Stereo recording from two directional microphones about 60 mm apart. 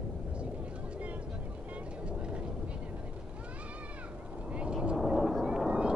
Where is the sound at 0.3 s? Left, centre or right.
Centre.